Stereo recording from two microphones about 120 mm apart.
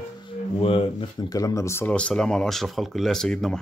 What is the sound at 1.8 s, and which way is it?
Speech, 10° left (ahead or behind).